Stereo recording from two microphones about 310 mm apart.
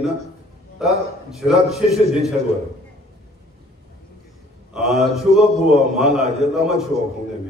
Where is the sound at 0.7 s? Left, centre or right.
Centre.